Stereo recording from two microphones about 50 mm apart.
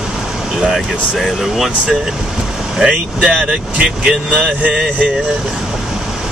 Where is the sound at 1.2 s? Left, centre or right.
Centre.